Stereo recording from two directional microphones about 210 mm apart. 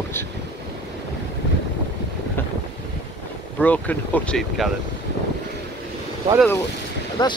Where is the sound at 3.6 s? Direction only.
5° left (ahead or behind).